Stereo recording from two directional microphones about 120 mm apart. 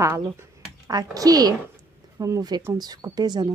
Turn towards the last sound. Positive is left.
turn(degrees=-35)  # may be behind; listen again after turning